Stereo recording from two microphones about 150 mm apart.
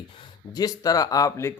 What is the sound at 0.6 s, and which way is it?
Speech, 25° left (ahead or behind).